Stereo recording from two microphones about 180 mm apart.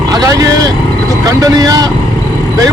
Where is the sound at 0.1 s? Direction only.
20° right (ahead or behind).